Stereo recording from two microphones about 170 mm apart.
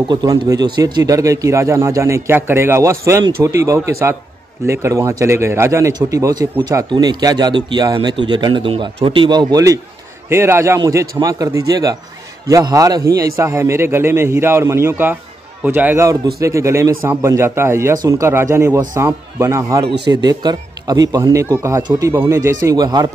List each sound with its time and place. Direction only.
0.1 s a man's voice: 25° right (ahead or behind)